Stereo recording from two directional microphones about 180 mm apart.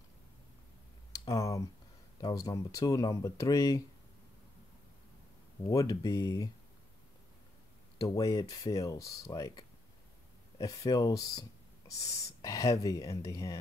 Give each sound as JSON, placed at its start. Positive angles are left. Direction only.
{"t": 1.1, "sound": "speech", "side_deg": 20}
{"t": 5.6, "sound": "speech", "side_deg": 20}
{"t": 8.2, "sound": "speech", "side_deg": 20}